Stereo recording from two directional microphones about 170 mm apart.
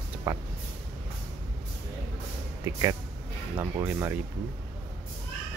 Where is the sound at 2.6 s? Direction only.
20° right (ahead or behind).